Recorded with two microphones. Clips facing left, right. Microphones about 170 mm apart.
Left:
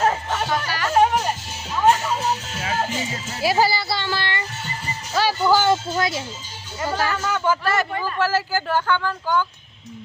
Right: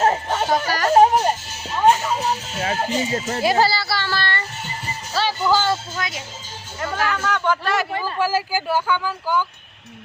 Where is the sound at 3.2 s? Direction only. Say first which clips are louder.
Right 8 dB; 50° right (ahead or behind).